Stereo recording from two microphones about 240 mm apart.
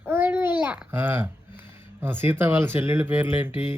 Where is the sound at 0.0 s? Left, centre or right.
Centre.